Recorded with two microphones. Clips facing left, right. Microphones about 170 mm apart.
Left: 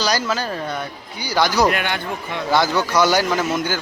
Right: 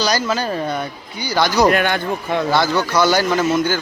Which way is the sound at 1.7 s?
45° right (ahead or behind).